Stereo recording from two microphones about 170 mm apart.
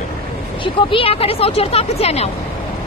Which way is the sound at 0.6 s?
30° left (ahead or behind).